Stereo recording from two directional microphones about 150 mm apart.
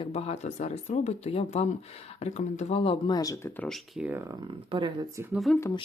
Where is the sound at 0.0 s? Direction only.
45° left (ahead or behind).